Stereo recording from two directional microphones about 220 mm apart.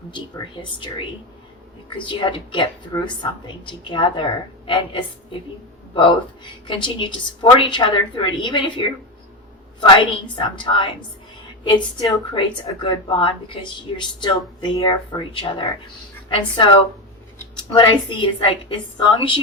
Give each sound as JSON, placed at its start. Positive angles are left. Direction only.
{"t": 0.1, "sound": "speech", "side_deg": 20}
{"t": 17.3, "sound": "speech", "side_deg": 15}